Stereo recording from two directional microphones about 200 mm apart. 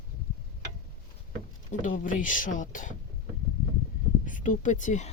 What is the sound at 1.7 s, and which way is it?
Speech, 40° left (ahead or behind).